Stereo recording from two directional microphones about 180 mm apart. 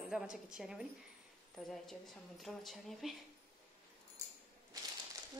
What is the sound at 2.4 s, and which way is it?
Speech, centre (ahead or behind).